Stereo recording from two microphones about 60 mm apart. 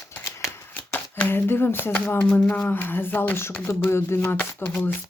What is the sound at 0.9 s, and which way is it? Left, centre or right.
Speech, left.